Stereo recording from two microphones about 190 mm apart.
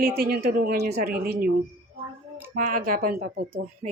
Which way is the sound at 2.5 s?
45° right (ahead or behind).